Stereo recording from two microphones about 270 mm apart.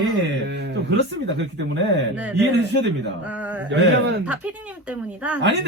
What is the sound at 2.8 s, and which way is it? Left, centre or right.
A man's voice, right.